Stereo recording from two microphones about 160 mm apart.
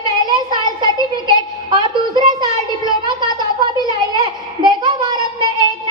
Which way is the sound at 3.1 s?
30° right (ahead or behind).